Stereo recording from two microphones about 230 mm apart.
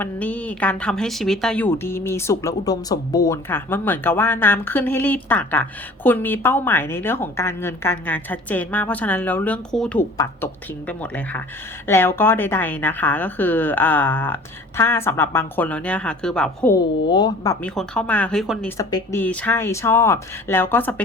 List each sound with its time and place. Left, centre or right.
0.0 s speech: centre
17.1 s speech: centre
18.8 s speech: centre